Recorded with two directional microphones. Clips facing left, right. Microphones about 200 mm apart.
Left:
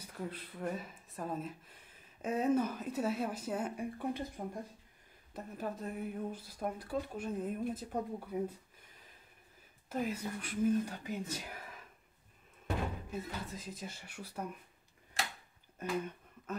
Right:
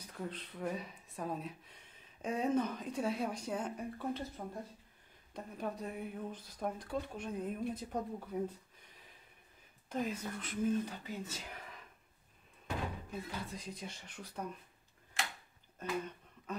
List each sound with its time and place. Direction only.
0.0 s speech: 10° left (ahead or behind)
5.3 s speech: 5° left (ahead or behind)
9.8 s speech: 5° left (ahead or behind)
13.1 s speech: 5° left (ahead or behind)
15.8 s a sound: 10° left (ahead or behind)